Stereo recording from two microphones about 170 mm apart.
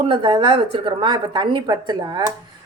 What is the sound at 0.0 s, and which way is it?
A woman's voice, 30° right (ahead or behind).